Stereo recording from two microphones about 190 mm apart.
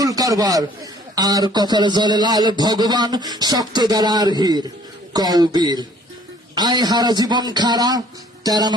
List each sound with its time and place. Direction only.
0.0 s a man's voice: 20° right (ahead or behind)